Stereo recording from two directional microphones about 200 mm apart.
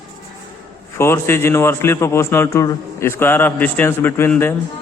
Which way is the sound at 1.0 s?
10° left (ahead or behind).